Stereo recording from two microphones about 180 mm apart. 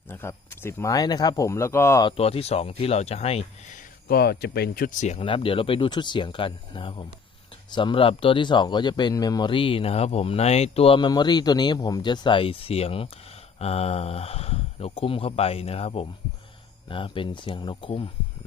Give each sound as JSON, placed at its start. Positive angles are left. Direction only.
{"t": 0.1, "sound": "speech", "side_deg": 15}
{"t": 2.0, "sound": "speech", "side_deg": 35}